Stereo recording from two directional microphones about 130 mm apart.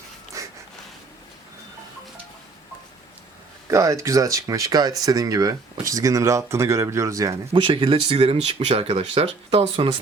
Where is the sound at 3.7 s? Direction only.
25° right (ahead or behind).